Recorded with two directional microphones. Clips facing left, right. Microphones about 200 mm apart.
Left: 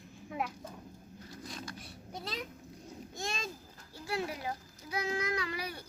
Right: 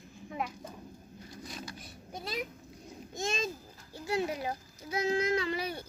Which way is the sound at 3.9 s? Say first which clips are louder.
Right 4 dB; 20° right (ahead or behind).